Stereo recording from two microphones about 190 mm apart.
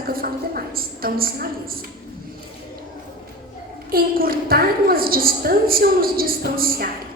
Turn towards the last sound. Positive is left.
turn(degrees=-50)  # may be behind; listen again after turning